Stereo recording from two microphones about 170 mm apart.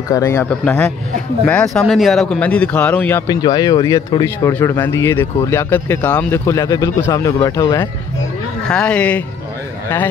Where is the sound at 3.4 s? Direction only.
25° left (ahead or behind).